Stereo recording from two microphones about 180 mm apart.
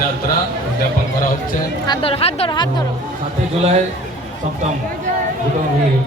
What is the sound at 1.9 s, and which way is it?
Speech, 30° left (ahead or behind).